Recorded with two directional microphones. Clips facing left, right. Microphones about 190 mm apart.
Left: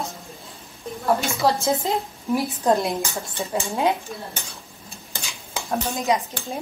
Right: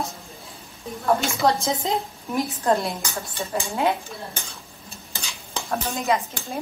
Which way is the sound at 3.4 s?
20° left (ahead or behind).